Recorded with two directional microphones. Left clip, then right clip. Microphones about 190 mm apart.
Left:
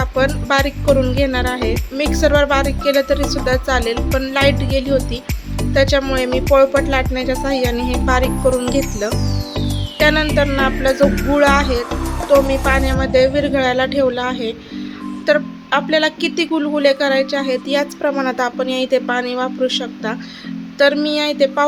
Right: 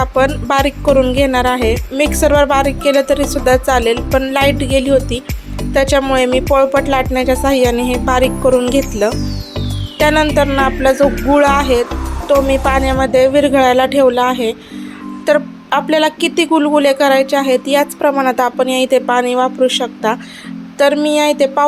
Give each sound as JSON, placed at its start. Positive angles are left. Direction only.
{"t": 0.4, "sound": "music", "side_deg": -20}
{"t": 0.9, "sound": "speech", "side_deg": -15}
{"t": 3.9, "sound": "music", "side_deg": 0}
{"t": 4.3, "sound": "speech", "side_deg": -15}
{"t": 6.5, "sound": "music", "side_deg": -20}
{"t": 7.4, "sound": "speech", "side_deg": -20}
{"t": 8.0, "sound": "music", "side_deg": -20}
{"t": 9.0, "sound": "speech", "side_deg": -15}